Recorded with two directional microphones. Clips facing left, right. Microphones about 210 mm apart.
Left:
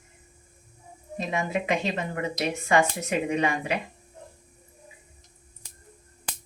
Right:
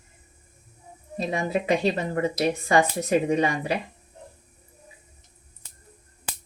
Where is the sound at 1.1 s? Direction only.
35° right (ahead or behind).